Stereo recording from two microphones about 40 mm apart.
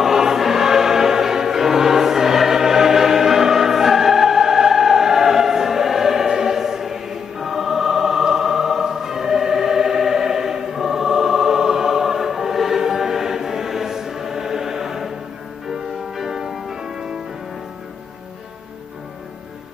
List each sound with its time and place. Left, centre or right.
0.0 s choir: centre
15.7 s music: centre